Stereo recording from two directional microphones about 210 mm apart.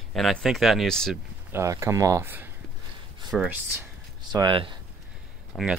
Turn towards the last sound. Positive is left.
turn(degrees=5)  # may be behind; listen again after turning